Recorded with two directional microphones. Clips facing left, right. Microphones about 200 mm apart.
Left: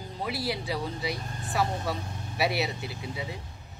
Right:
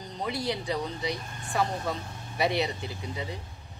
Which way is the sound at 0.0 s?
5° left (ahead or behind).